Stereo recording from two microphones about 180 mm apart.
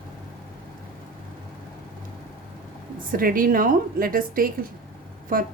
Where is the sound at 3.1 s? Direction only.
50° right (ahead or behind).